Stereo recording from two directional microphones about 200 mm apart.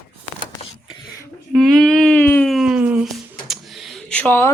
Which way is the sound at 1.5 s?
Centre (ahead or behind).